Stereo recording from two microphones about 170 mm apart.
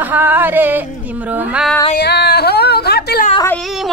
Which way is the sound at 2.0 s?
80° left.